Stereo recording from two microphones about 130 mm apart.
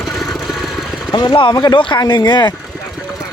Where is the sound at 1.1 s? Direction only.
35° left (ahead or behind).